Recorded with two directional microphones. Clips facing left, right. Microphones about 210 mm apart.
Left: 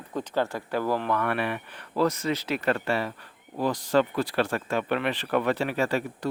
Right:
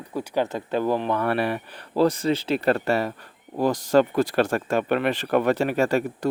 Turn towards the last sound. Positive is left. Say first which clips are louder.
# right 5 dB
turn(degrees=-45)  # may be behind; listen again after turning